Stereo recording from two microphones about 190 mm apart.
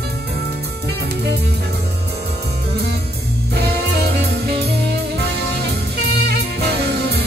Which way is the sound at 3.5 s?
60° right (ahead or behind).